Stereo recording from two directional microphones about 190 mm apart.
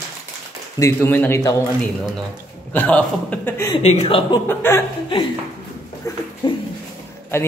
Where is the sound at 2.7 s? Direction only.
5° left (ahead or behind).